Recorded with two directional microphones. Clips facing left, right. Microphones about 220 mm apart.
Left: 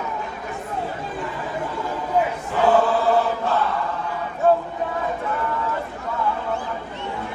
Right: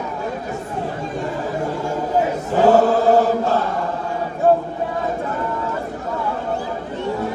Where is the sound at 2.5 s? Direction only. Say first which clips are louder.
Right 5 dB; 45° right (ahead or behind).